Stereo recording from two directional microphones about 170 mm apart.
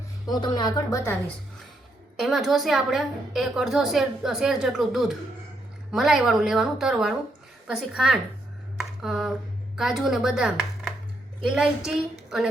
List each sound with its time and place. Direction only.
0.3 s speech: 25° left (ahead or behind)
2.2 s a woman's voice: centre (ahead or behind)
8.8 s a sound: centre (ahead or behind)
9.7 s a woman's voice: centre (ahead or behind)